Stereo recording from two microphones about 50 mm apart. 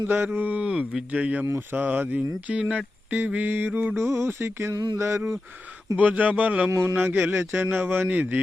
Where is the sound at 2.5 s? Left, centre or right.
Right.